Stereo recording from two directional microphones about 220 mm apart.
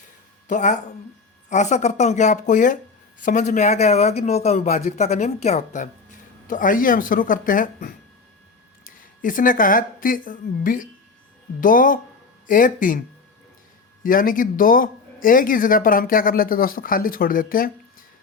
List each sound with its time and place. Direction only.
0.4 s speech: 35° left (ahead or behind)
14.0 s speech: 40° left (ahead or behind)